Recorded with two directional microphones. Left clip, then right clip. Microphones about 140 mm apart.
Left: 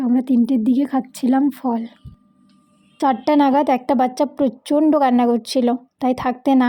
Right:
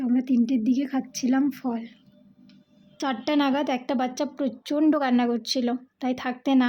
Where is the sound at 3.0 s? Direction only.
35° left (ahead or behind).